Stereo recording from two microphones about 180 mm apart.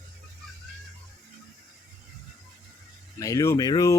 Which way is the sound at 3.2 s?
20° left (ahead or behind).